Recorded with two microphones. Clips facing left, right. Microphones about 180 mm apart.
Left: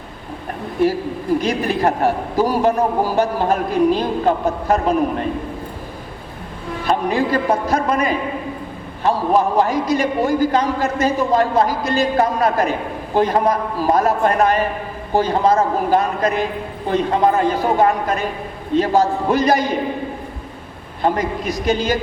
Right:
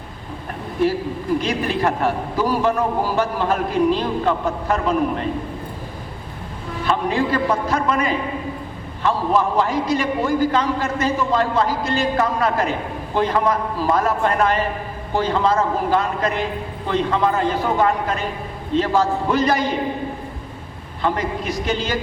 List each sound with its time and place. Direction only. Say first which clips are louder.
1.4 s a man's voice: left 2 dB; 40° left (ahead or behind)
6.8 s a man's voice: left 2 dB; 40° left (ahead or behind)
21.0 s a man's voice: left 3 dB; 40° left (ahead or behind)